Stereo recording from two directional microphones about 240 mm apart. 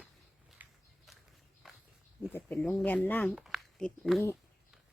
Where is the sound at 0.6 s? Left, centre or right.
Centre.